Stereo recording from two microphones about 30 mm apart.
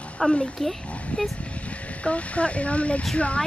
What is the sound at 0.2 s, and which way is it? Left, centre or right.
Speech, left.